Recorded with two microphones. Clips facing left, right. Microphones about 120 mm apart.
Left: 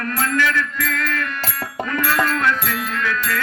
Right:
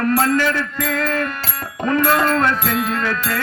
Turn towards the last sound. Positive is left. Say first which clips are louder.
# right 2 dB
turn(degrees=-35)  # may be behind; listen again after turning